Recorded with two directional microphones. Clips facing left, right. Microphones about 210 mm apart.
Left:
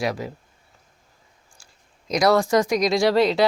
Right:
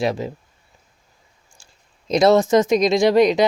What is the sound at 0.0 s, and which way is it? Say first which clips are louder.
Speech: right 4 dB; 25° right (ahead or behind).